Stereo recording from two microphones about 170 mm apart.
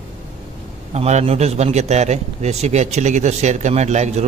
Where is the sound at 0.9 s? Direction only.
40° right (ahead or behind).